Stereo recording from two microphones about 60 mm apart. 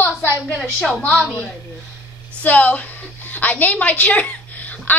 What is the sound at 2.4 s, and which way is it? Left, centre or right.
A woman's voice, left.